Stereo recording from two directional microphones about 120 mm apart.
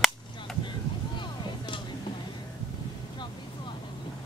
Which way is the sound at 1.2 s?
40° left (ahead or behind).